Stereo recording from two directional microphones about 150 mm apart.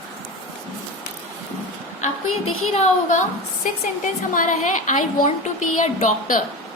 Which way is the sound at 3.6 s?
60° left (ahead or behind).